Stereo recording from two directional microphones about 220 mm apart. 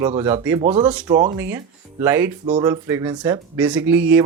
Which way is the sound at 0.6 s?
25° right (ahead or behind).